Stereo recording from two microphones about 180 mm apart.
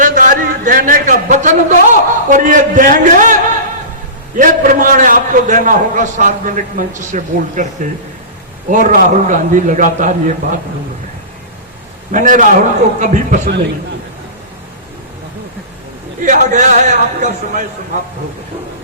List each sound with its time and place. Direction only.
0.0 s a sound: 45° right (ahead or behind)
4.4 s a man's voice: 45° right (ahead or behind)
12.1 s a man's voice: 45° right (ahead or behind)
16.2 s a man's voice: 45° right (ahead or behind)